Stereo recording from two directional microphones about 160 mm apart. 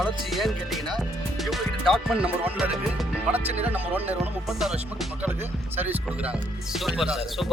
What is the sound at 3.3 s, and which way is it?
Speech, 40° right (ahead or behind).